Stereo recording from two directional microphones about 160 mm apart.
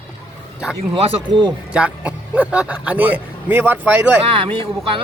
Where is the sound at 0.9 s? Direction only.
30° right (ahead or behind).